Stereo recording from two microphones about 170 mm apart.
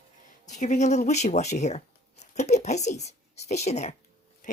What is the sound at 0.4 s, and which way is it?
Speech, 45° left (ahead or behind).